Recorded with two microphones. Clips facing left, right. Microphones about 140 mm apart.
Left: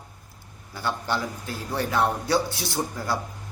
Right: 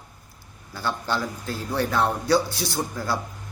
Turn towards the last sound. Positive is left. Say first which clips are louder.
# right 1 dB
turn(degrees=20)  # may be behind; listen again after turning